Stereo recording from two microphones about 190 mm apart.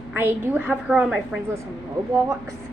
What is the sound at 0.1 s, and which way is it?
A woman's voice, 10° right (ahead or behind).